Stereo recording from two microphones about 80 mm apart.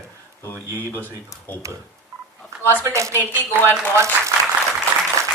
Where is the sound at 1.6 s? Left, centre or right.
Right.